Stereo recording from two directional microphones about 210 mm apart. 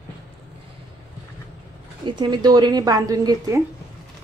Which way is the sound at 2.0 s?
20° right (ahead or behind).